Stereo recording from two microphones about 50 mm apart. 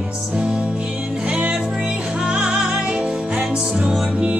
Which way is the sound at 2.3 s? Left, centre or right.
Centre.